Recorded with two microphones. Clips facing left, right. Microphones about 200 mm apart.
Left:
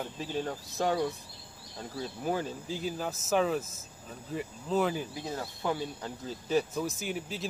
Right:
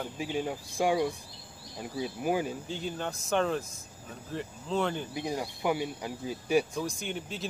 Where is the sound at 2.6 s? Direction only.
5° left (ahead or behind).